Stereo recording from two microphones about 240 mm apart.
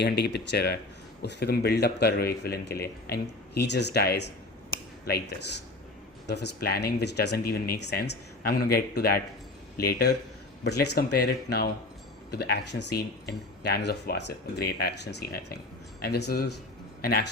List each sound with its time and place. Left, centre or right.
0.0 s speech: left
6.2 s a man's voice: left